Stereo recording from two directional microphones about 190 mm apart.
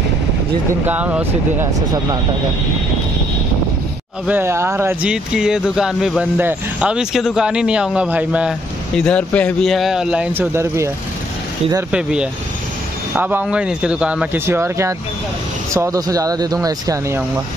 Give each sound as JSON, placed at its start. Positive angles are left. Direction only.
{"t": 0.8, "sound": "speech", "side_deg": -10}
{"t": 4.3, "sound": "speech", "side_deg": -15}
{"t": 11.9, "sound": "speech", "side_deg": -5}